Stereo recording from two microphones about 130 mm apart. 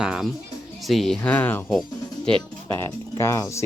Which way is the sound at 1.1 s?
10° left (ahead or behind).